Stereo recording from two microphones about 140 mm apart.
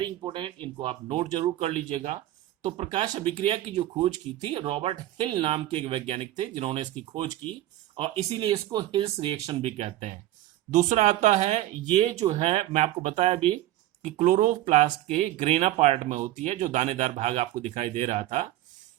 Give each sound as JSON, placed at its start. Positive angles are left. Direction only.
{"t": 0.0, "sound": "speech", "side_deg": -35}
{"t": 7.9, "sound": "speech", "side_deg": -45}
{"t": 8.4, "sound": "speech", "side_deg": -35}
{"t": 14.0, "sound": "speech", "side_deg": -60}
{"t": 15.1, "sound": "speech", "side_deg": -50}